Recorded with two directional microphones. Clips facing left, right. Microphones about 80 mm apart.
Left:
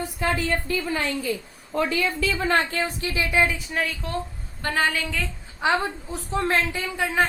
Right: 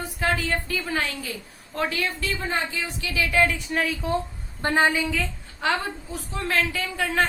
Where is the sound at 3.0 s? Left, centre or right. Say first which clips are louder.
Even; left.